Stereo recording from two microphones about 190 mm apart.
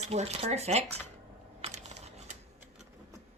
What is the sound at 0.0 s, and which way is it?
Speech, 35° right (ahead or behind).